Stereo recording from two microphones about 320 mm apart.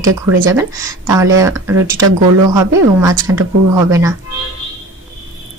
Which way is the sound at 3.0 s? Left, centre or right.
Centre.